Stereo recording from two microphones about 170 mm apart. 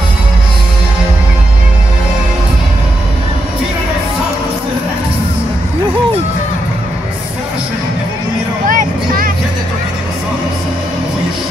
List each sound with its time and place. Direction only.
8.6 s vehicle: 55° right (ahead or behind)